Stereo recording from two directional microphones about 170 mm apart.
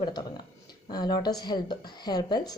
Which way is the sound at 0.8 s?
25° left (ahead or behind).